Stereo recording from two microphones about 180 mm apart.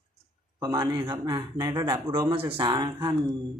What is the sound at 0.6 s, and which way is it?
Speech, 20° right (ahead or behind).